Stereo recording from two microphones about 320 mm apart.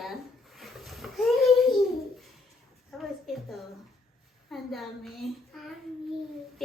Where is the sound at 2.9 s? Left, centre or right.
Centre.